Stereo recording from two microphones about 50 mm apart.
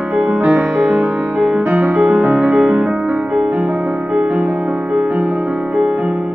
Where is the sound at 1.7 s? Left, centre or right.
Right.